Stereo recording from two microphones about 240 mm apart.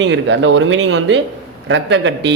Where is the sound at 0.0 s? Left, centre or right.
Right.